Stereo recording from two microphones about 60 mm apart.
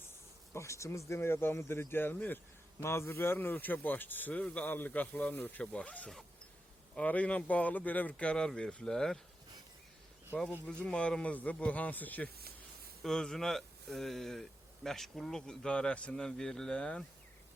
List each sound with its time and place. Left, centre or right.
0.5 s speech: left
2.8 s a man's voice: left
3.3 s speech: left
8.1 s a man's voice: centre
10.8 s speech: centre
13.0 s a man's voice: centre